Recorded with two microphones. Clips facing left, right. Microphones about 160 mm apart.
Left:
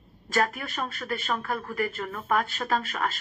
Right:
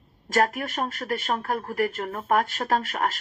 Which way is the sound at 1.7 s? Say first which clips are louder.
Right 4 dB; 55° right (ahead or behind).